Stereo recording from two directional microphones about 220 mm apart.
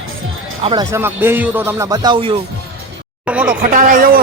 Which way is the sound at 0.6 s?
20° right (ahead or behind).